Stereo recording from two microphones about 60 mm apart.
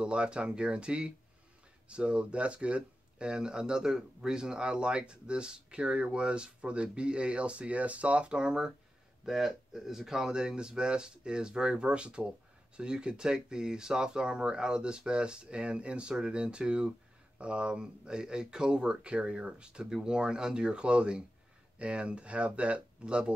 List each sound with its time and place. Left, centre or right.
0.0 s speech: centre